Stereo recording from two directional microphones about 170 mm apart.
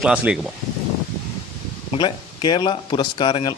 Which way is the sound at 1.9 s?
25° left (ahead or behind).